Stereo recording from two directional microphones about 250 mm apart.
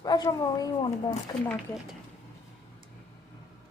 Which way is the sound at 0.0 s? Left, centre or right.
Centre.